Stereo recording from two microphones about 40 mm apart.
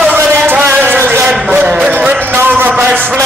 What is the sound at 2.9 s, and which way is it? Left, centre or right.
Speech, right.